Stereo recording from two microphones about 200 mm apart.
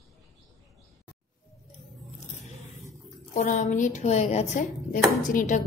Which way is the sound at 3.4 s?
40° left (ahead or behind).